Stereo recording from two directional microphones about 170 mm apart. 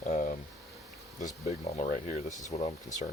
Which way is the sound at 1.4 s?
50° left (ahead or behind).